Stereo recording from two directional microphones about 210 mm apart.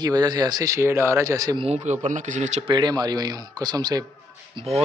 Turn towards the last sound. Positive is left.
turn(degrees=-30)  # may be behind; listen again after turning